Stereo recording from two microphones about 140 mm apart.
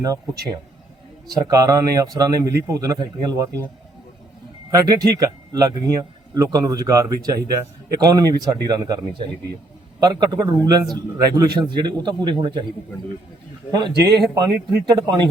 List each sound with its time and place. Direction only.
1.3 s speech: 25° right (ahead or behind)
4.7 s speech: 30° right (ahead or behind)
13.8 s speech: 30° right (ahead or behind)